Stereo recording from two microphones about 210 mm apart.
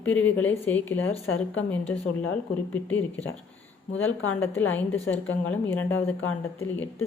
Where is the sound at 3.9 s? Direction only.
70° left (ahead or behind).